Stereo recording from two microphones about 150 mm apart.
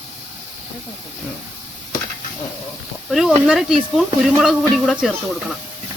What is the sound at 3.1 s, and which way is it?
Speech, 5° right (ahead or behind).